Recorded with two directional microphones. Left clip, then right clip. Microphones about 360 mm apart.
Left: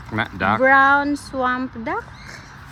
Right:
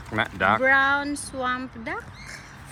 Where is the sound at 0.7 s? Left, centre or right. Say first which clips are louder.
Left 6 dB; left.